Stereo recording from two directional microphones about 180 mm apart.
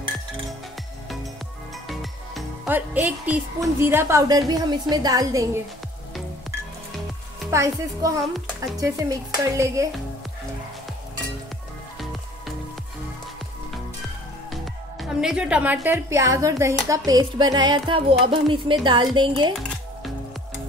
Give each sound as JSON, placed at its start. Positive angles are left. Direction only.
{"t": 1.9, "sound": "music", "side_deg": 0}
{"t": 2.7, "sound": "a woman's voice", "side_deg": -10}
{"t": 7.5, "sound": "a woman's voice", "side_deg": -15}
{"t": 14.5, "sound": "a woman's voice", "side_deg": 0}